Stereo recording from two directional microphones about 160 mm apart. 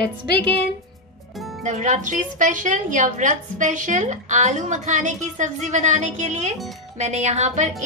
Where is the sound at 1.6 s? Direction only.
50° right (ahead or behind).